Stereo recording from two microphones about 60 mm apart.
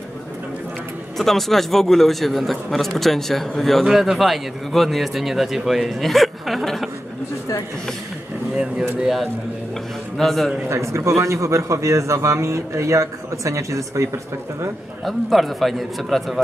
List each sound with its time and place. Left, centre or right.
1.1 s speech: centre
9.0 s speech: centre
10.7 s a man's voice: right
15.0 s speech: centre